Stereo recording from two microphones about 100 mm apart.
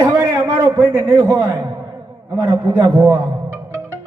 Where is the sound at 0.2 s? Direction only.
35° right (ahead or behind).